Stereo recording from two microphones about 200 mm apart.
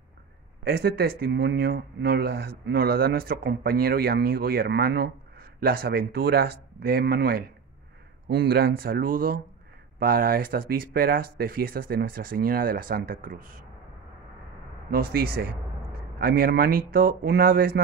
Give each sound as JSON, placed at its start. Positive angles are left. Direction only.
{"t": 0.7, "sound": "speech", "side_deg": -50}
{"t": 14.9, "sound": "speech", "side_deg": -50}